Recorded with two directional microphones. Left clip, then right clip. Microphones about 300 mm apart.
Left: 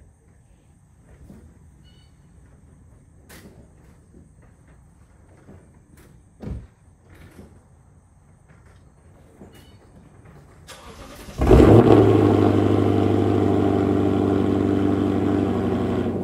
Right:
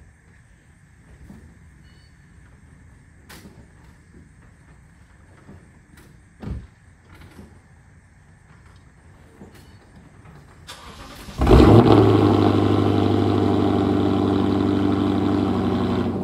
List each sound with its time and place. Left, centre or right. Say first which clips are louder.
6.4 s vehicle: even; centre
10.7 s vehicle: right 2 dB; centre